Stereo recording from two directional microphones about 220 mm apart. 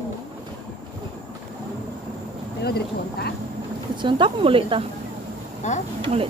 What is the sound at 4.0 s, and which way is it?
Speech, 20° right (ahead or behind).